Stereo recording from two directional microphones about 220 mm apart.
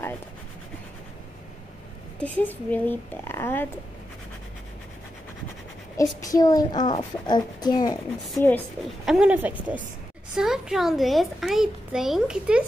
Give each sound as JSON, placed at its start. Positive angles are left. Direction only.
{"t": 2.1, "sound": "a child's voice", "side_deg": 5}
{"t": 5.9, "sound": "a child's voice", "side_deg": 15}
{"t": 9.0, "sound": "a child's voice", "side_deg": -5}